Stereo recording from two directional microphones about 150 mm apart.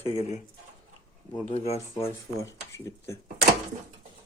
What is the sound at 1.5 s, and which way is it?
Speech, 45° left (ahead or behind).